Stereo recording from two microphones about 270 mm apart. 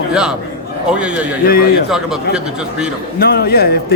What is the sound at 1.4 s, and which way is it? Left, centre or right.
Speech, left.